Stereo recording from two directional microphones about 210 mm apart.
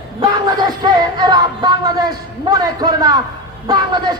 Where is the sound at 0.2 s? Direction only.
20° right (ahead or behind).